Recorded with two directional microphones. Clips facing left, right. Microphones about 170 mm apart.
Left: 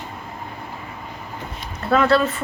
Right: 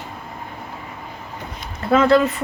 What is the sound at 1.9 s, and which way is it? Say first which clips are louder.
Speech: right 2 dB; 15° right (ahead or behind).